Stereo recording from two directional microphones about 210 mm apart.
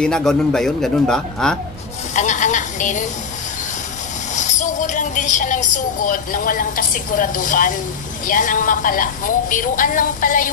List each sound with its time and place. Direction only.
0.0 s speech: 5° left (ahead or behind)
2.1 s a sound: 35° left (ahead or behind)
4.4 s a woman's voice: 35° left (ahead or behind)